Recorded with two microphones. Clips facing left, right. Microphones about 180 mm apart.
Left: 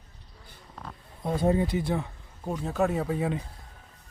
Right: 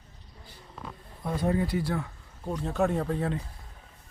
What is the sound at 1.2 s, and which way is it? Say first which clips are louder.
Speech: left 3 dB; 25° left (ahead or behind).